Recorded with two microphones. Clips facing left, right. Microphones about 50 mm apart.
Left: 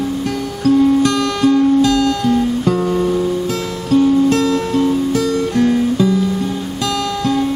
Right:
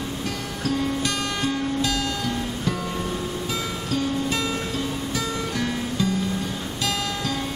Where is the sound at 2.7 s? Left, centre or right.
Left.